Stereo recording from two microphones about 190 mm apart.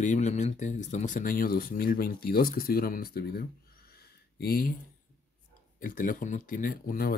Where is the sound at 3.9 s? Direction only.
55° left (ahead or behind).